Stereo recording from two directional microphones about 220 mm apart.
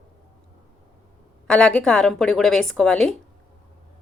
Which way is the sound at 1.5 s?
5° left (ahead or behind).